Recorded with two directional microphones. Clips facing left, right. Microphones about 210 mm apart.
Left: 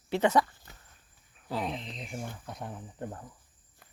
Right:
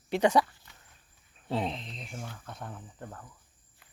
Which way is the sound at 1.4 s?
25° right (ahead or behind).